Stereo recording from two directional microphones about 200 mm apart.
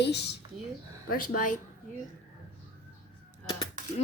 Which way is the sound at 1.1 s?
45° left (ahead or behind).